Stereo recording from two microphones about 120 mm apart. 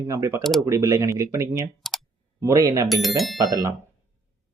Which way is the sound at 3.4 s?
30° right (ahead or behind).